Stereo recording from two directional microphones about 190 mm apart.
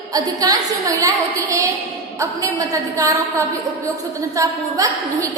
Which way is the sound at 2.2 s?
15° right (ahead or behind).